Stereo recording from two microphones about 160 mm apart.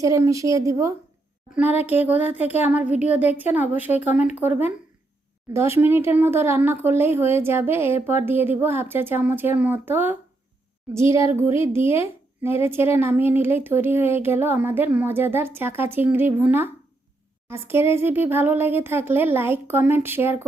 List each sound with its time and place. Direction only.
0.0 s speech: 20° right (ahead or behind)
2.0 s speech: 10° right (ahead or behind)
3.9 s speech: 45° left (ahead or behind)
4.4 s speech: 10° right (ahead or behind)